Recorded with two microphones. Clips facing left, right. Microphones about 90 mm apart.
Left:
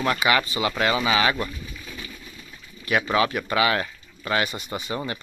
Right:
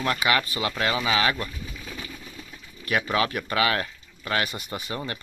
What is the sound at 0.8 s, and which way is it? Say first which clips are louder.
Speech: left 2 dB; 10° left (ahead or behind).